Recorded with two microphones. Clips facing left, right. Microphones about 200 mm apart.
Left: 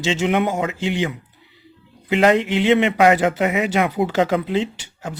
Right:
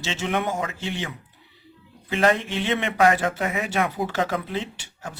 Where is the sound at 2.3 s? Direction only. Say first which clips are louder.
Left 8 dB; 90° left.